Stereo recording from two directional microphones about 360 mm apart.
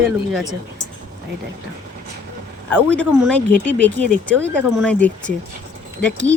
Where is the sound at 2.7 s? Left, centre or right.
Centre.